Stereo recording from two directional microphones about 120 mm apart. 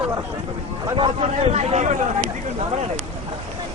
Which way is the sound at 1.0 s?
65° right (ahead or behind).